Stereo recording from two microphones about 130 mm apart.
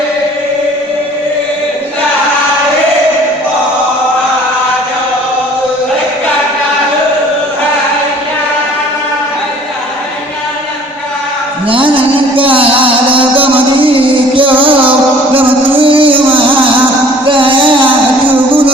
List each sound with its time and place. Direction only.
11.7 s music: 40° right (ahead or behind)
15.4 s music: 15° right (ahead or behind)
15.8 s music: 40° right (ahead or behind)
17.2 s music: 40° right (ahead or behind)
17.8 s music: 15° right (ahead or behind)